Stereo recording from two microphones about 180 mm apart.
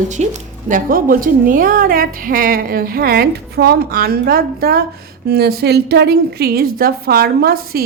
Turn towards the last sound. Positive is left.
turn(degrees=-55)  # may be behind; listen again after turning